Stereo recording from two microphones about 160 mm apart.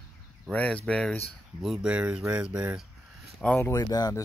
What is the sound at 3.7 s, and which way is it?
Speech, 25° left (ahead or behind).